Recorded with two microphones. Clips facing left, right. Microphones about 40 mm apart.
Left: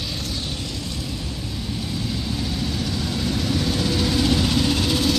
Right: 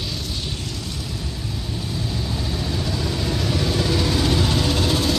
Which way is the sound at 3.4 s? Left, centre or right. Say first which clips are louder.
Right 2 dB; right.